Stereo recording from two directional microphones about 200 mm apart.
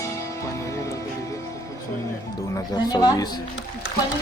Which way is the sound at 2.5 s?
20° left (ahead or behind).